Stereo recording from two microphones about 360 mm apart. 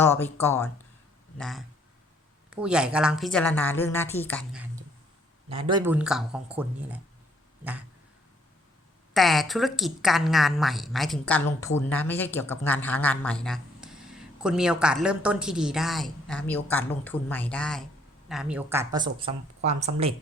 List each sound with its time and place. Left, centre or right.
0.0 s a woman's voice: centre
5.5 s a woman's voice: centre
9.1 s a woman's voice: centre